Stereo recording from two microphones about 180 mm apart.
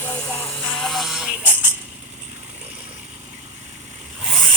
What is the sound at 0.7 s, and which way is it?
Synthetic singing, centre (ahead or behind).